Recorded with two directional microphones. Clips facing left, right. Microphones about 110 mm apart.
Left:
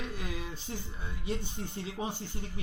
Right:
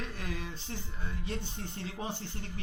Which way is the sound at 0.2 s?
10° left (ahead or behind).